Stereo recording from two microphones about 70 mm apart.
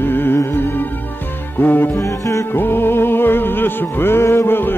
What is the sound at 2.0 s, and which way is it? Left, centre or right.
Music, left.